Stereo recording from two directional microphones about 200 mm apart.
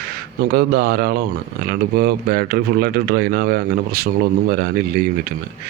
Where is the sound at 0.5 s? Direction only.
50° right (ahead or behind).